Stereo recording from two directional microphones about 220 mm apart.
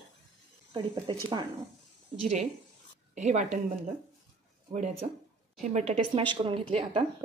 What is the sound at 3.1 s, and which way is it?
Speech, 30° right (ahead or behind).